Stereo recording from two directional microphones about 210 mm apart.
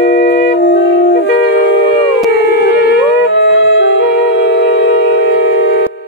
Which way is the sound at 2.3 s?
55° left (ahead or behind).